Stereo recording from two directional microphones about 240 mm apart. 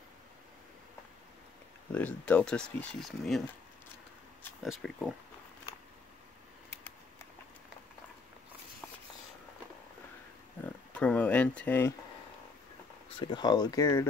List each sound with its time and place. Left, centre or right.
1.9 s speech: centre
4.4 s a sound: centre
10.6 s speech: centre
13.1 s speech: centre